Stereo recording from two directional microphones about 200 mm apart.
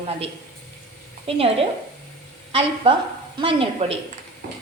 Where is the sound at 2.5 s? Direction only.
25° right (ahead or behind).